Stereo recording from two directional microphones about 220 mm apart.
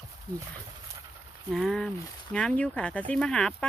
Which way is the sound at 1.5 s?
Centre (ahead or behind).